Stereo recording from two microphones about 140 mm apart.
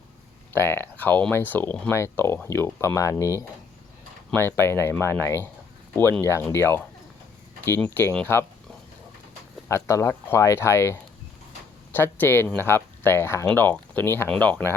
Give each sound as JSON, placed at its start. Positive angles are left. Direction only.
{"t": 0.5, "sound": "speech", "side_deg": 15}
{"t": 9.6, "sound": "speech", "side_deg": 20}